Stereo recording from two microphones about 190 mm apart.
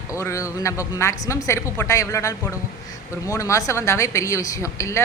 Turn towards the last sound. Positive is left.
turn(degrees=15)  # may be behind; listen again after turning